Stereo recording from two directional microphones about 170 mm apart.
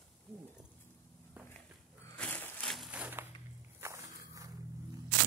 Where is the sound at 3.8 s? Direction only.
15° right (ahead or behind).